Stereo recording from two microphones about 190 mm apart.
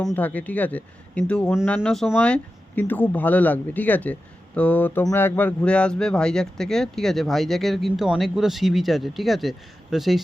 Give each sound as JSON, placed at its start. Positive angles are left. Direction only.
{"t": 0.2, "sound": "speech", "side_deg": 10}